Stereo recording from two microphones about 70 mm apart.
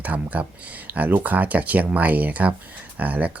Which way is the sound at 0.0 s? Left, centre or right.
Right.